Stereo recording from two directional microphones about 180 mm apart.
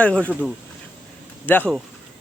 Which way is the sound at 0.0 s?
5° left (ahead or behind).